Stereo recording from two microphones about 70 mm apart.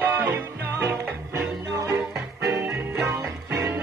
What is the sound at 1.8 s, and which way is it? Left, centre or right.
Music, centre.